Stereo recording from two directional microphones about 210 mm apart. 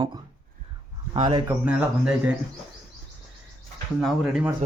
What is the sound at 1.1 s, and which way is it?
Speech, 25° right (ahead or behind).